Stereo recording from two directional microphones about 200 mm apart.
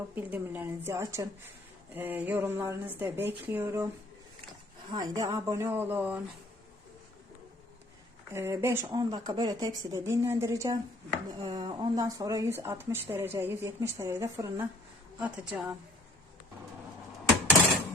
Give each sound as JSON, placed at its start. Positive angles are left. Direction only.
{"t": 0.1, "sound": "speech", "side_deg": -10}
{"t": 4.9, "sound": "speech", "side_deg": -20}
{"t": 8.3, "sound": "speech", "side_deg": -10}